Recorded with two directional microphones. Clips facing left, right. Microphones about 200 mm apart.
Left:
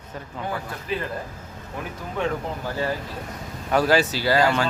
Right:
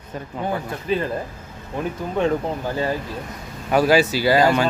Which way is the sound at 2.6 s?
20° right (ahead or behind).